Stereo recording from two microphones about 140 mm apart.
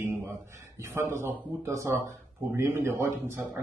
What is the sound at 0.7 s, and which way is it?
A man's voice, 20° right (ahead or behind).